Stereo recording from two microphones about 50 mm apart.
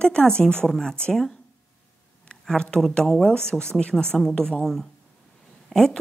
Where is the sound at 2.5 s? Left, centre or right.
Centre.